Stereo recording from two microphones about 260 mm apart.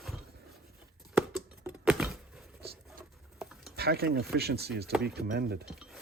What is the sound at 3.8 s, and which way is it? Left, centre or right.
Speech, right.